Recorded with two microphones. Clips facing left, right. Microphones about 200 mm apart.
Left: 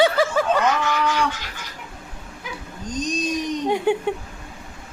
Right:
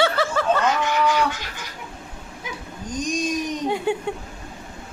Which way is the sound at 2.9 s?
10° right (ahead or behind).